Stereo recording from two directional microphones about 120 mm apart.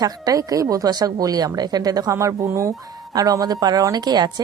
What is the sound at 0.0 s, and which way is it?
A woman's voice, 30° right (ahead or behind).